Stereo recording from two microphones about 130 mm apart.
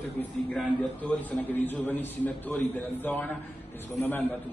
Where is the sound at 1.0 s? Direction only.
15° left (ahead or behind).